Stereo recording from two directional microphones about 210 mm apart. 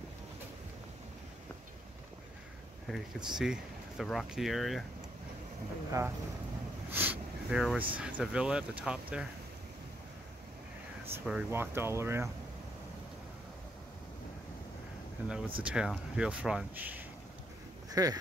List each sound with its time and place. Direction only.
3.3 s speech: centre (ahead or behind)
5.9 s speech: 15° right (ahead or behind)
6.9 s a sound: 10° right (ahead or behind)
7.9 s speech: 5° right (ahead or behind)
11.1 s speech: 5° right (ahead or behind)
15.2 s speech: 5° right (ahead or behind)
17.8 s a sound: 15° right (ahead or behind)